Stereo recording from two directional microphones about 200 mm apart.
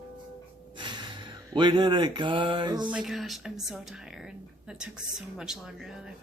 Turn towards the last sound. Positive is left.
turn(degrees=0)  # may be behind; listen again after turning